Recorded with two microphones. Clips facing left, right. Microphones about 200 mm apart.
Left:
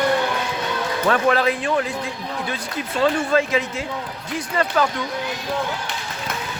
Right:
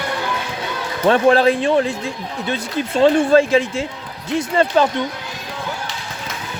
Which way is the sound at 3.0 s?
30° right (ahead or behind).